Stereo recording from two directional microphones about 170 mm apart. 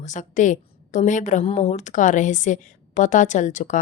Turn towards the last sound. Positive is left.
turn(degrees=45)  # may be behind; listen again after turning